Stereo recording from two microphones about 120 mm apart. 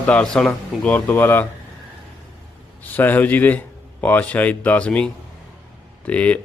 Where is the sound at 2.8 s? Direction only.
15° left (ahead or behind).